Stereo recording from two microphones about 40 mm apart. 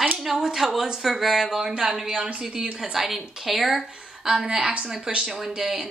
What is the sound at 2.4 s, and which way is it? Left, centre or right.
A woman's voice, centre.